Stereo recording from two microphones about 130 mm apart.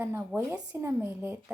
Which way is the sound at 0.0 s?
15° right (ahead or behind).